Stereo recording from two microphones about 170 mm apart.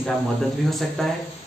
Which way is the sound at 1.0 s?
Centre (ahead or behind).